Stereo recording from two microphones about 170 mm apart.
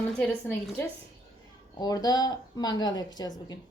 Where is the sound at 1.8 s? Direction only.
20° left (ahead or behind).